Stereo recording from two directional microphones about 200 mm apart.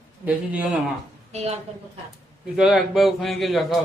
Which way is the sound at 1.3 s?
30° right (ahead or behind).